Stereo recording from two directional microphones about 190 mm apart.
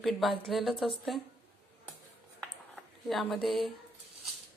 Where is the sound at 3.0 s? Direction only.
Centre (ahead or behind).